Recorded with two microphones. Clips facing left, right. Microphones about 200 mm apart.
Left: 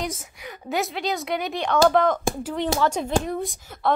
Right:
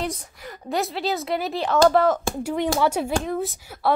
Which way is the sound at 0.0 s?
Centre (ahead or behind).